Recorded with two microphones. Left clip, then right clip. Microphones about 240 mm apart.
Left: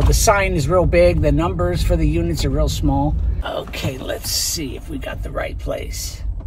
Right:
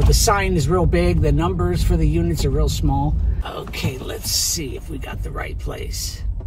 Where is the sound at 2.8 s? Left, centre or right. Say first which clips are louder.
Left 4 dB; left.